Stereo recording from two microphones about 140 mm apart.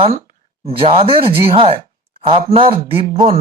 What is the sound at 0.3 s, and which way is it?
Speech, 45° right (ahead or behind).